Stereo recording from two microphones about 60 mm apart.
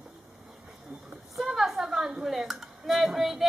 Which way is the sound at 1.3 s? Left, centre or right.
Centre.